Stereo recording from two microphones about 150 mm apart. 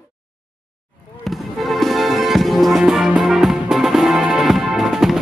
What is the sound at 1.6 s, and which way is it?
Music, centre (ahead or behind).